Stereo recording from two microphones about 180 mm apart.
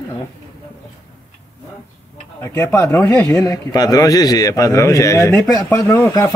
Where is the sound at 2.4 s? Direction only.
15° left (ahead or behind).